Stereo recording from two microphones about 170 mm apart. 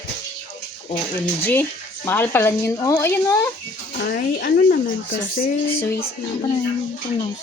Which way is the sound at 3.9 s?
65° left (ahead or behind).